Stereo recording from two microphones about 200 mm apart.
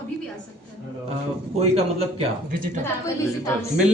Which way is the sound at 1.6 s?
30° right (ahead or behind).